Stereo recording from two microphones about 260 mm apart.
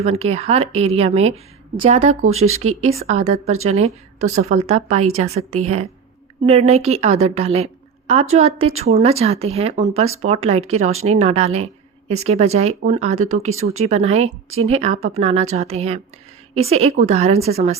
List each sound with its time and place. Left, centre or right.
0.0 s a woman's voice: right